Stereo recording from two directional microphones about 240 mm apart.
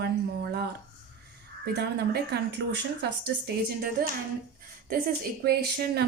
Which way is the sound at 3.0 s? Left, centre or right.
Right.